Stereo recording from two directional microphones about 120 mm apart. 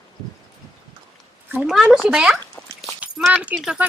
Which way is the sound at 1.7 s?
5° right (ahead or behind).